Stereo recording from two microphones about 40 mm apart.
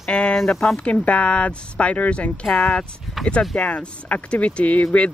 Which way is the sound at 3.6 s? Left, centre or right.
Left.